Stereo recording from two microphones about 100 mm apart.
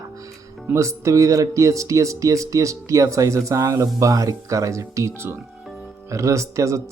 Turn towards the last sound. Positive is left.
turn(degrees=-30)  # may be behind; listen again after turning